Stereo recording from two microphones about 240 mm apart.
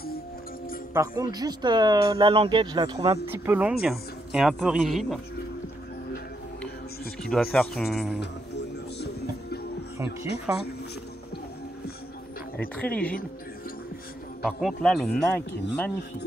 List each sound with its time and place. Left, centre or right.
0.9 s speech: centre
3.3 s speech: centre
7.2 s speech: centre
8.2 s music: left
10.5 s speech: centre
12.5 s speech: centre
14.4 s speech: centre